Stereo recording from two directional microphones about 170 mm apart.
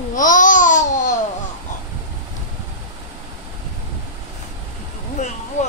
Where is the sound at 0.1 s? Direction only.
50° left (ahead or behind).